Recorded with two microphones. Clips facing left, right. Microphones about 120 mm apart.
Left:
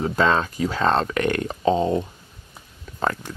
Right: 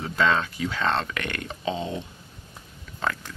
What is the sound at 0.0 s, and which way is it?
Speech, 40° left (ahead or behind).